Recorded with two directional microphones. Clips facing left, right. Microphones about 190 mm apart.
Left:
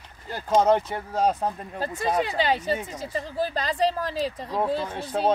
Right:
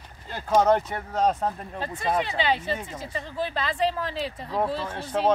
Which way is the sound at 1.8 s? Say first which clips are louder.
Left 2 dB; 40° left (ahead or behind).